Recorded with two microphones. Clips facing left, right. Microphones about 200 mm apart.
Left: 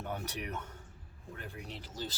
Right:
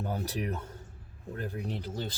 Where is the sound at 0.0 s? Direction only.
35° right (ahead or behind).